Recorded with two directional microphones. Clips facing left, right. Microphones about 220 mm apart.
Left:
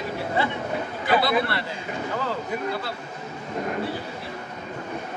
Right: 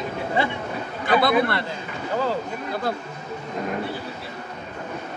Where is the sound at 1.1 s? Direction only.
50° right (ahead or behind).